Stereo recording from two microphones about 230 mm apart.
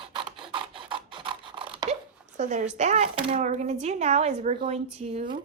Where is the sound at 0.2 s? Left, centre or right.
Right.